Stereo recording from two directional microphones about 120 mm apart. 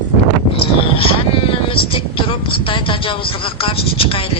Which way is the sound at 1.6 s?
50° left (ahead or behind).